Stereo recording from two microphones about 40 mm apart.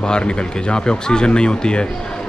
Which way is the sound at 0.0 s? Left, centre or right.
Left.